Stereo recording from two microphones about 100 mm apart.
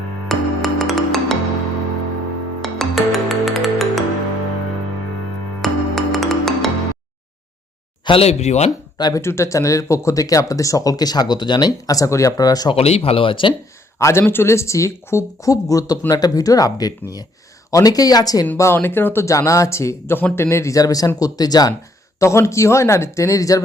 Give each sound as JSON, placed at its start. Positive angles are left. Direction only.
{"t": 0.3, "sound": "music", "side_deg": 0}
{"t": 2.6, "sound": "music", "side_deg": 0}
{"t": 5.6, "sound": "music", "side_deg": 0}
{"t": 8.0, "sound": "speech", "side_deg": 80}
{"t": 9.0, "sound": "speech", "side_deg": 40}
{"t": 9.2, "sound": "speech", "side_deg": 30}
{"t": 12.7, "sound": "speech", "side_deg": 90}
{"t": 14.0, "sound": "speech", "side_deg": 25}
{"t": 18.5, "sound": "speech", "side_deg": 25}
{"t": 22.2, "sound": "speech", "side_deg": 30}